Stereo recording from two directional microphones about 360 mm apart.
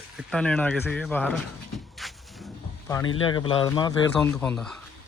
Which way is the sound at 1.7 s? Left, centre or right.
Centre.